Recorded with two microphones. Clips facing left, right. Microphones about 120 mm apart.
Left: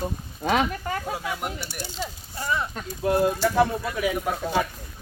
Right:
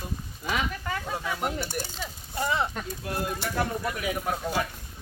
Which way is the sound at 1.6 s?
45° right (ahead or behind).